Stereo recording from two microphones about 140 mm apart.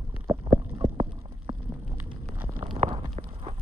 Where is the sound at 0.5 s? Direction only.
40° right (ahead or behind).